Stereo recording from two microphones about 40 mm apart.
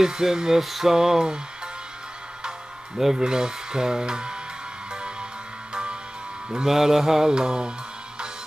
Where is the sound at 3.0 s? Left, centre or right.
Centre.